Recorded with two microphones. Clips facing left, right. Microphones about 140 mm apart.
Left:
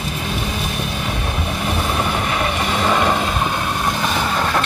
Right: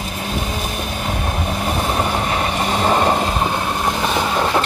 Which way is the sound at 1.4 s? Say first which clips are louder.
Right 1 dB; 30° right (ahead or behind).